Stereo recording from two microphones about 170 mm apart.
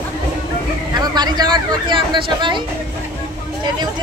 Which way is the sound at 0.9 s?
25° right (ahead or behind).